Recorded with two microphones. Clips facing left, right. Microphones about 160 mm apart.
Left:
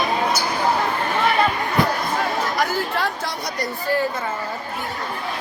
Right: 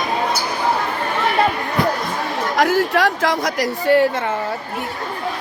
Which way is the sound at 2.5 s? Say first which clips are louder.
Right 6 dB; 90° right.